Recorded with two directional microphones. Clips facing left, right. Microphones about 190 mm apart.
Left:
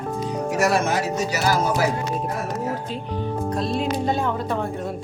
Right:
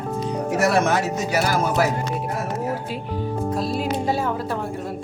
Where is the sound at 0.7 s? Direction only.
60° right (ahead or behind).